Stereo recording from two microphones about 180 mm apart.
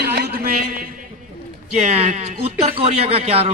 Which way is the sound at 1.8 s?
35° right (ahead or behind).